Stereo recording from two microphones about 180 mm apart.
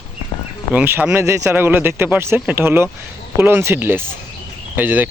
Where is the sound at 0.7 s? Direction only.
10° right (ahead or behind).